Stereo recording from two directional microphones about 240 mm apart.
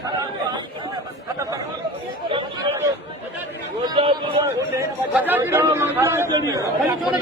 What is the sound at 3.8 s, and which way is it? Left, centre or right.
A man's voice, centre.